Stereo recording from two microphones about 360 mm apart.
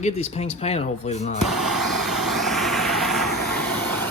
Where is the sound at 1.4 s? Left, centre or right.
Centre.